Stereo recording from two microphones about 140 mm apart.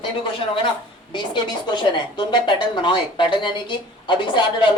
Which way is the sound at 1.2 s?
30° left (ahead or behind).